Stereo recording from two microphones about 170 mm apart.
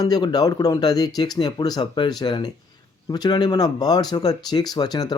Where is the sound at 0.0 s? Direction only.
25° left (ahead or behind).